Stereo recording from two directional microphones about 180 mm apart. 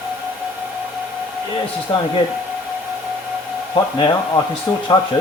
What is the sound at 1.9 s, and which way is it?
Speech, 25° left (ahead or behind).